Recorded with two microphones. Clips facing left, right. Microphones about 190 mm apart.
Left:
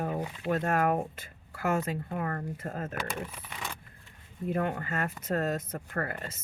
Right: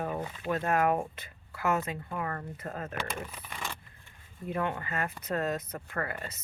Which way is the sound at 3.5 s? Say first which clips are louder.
Right 3 dB; 10° left (ahead or behind).